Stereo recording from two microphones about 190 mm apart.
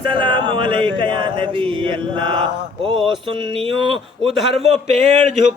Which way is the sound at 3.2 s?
25° right (ahead or behind).